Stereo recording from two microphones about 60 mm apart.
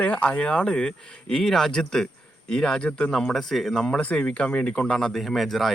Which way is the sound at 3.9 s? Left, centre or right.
Left.